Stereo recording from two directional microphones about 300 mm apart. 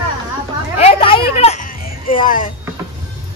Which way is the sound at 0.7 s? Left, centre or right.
Centre.